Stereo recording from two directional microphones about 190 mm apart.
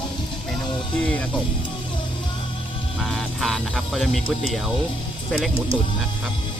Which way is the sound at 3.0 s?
Centre (ahead or behind).